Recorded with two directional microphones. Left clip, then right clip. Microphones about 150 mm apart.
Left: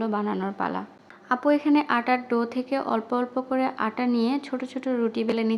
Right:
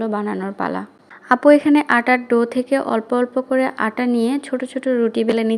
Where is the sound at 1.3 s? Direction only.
35° right (ahead or behind).